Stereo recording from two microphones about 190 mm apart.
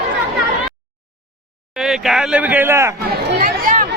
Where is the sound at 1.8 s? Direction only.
Centre (ahead or behind).